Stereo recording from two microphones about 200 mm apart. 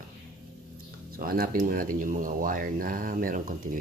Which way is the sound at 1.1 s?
45° right (ahead or behind).